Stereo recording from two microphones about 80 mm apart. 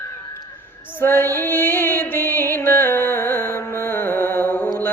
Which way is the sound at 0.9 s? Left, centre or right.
Left.